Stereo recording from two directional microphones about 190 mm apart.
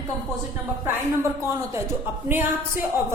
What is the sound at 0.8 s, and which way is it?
A woman's voice, 15° right (ahead or behind).